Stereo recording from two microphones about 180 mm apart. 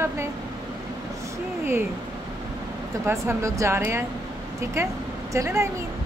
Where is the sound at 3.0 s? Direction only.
15° right (ahead or behind).